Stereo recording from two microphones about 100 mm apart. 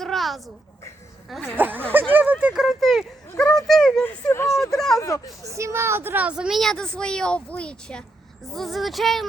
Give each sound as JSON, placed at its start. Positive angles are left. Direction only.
{"t": 0.0, "sound": "a sound", "side_deg": 0}
{"t": 1.5, "sound": "speech", "side_deg": -20}
{"t": 2.6, "sound": "speech", "side_deg": 0}
{"t": 4.0, "sound": "speech", "side_deg": 25}
{"t": 4.7, "sound": "speech", "side_deg": 5}
{"t": 4.9, "sound": "speech", "side_deg": 30}
{"t": 5.5, "sound": "speech", "side_deg": -30}
{"t": 6.6, "sound": "a child's voice", "side_deg": 5}